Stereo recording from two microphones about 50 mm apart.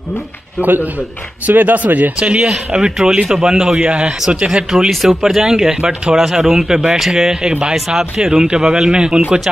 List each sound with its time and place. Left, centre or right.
0.6 s speech: right
2.1 s speech: right
4.6 s speech: centre